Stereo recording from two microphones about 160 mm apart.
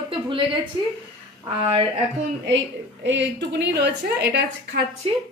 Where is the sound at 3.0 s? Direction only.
90° right.